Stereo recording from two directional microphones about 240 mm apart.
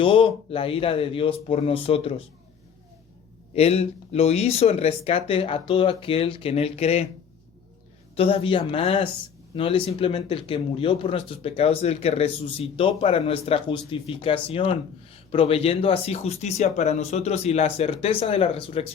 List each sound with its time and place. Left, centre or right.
0.0 s speech: left
3.5 s speech: left
8.1 s speech: left